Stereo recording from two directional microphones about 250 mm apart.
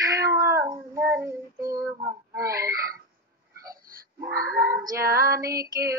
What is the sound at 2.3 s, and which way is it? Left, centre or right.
Speech, centre.